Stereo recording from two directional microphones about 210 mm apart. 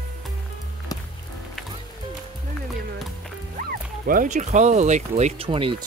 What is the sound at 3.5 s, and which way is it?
Speech, 40° right (ahead or behind).